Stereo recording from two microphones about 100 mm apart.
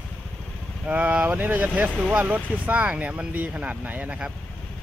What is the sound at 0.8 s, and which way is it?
Speech, 15° right (ahead or behind).